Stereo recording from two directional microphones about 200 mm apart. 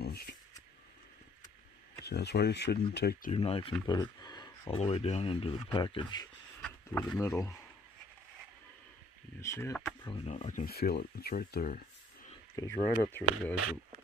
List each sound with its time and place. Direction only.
0.0 s a sound: 50° left (ahead or behind)
2.0 s speech: 55° left (ahead or behind)
3.3 s speech: 30° left (ahead or behind)
6.6 s speech: 5° left (ahead or behind)
9.4 s speech: 15° left (ahead or behind)
10.0 s speech: 30° left (ahead or behind); by 11.8 s 45° left (ahead or behind)
12.5 s speech: 15° left (ahead or behind)